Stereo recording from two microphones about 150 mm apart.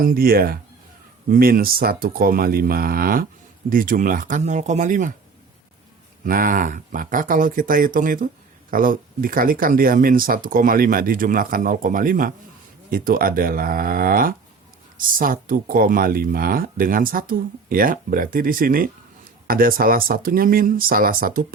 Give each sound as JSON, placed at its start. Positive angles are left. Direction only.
{"t": 0.0, "sound": "speech", "side_deg": -75}
{"t": 6.2, "sound": "speech", "side_deg": -70}